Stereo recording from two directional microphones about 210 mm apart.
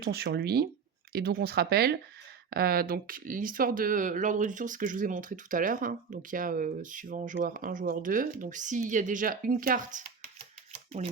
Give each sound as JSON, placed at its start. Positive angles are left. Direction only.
{"t": 0.0, "sound": "speech", "side_deg": -50}
{"t": 10.7, "sound": "typewriter", "side_deg": -30}